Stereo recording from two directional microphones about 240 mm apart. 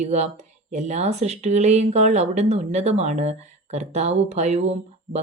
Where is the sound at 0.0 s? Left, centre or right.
Right.